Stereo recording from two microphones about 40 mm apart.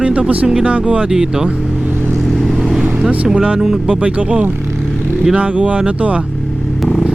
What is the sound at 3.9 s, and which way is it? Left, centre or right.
Speech, right.